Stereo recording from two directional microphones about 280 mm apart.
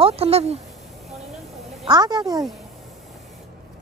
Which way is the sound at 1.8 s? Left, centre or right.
Centre.